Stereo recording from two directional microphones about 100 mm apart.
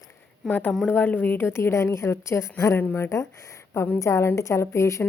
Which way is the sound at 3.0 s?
30° left (ahead or behind).